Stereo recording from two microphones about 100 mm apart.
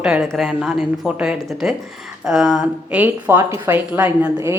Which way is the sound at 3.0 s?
20° right (ahead or behind).